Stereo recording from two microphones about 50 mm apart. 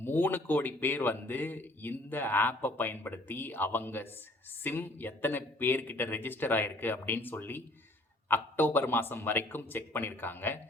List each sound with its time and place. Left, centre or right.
0.0 s a man's voice: left